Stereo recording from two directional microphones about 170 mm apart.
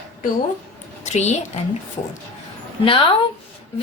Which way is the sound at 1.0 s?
40° left (ahead or behind).